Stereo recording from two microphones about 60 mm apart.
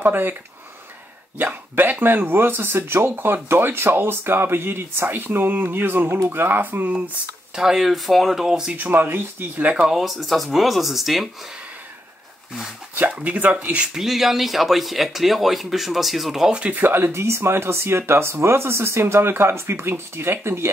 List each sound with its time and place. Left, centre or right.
0.0 s speech: right
1.4 s speech: right
7.5 s speech: centre
8.7 s speech: right
9.8 s speech: centre
13.2 s speech: right
13.9 s speech: centre
16.5 s speech: right